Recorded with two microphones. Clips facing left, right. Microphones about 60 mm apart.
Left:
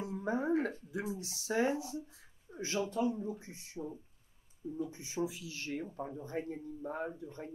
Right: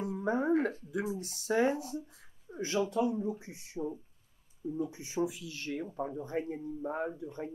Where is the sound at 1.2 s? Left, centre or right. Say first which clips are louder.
Right 3 dB; right.